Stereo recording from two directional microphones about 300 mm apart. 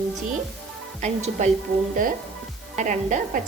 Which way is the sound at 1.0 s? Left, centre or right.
Right.